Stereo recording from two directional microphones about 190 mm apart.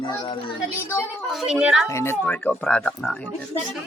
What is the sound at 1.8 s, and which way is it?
Speech, 15° left (ahead or behind).